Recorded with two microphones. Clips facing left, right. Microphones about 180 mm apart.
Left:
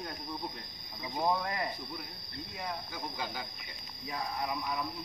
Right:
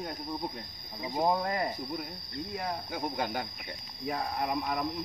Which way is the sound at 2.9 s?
55° right (ahead or behind).